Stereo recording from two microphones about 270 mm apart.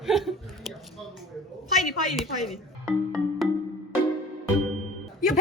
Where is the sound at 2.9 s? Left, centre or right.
Centre.